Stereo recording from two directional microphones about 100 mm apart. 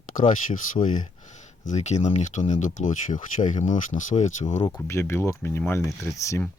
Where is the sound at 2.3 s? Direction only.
90° left.